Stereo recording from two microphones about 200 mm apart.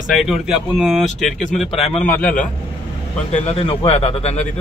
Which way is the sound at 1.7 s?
30° left (ahead or behind).